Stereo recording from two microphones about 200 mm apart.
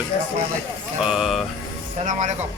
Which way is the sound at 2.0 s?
35° right (ahead or behind).